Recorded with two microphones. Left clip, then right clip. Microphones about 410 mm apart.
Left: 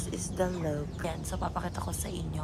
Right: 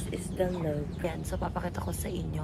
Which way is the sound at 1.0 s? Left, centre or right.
Centre.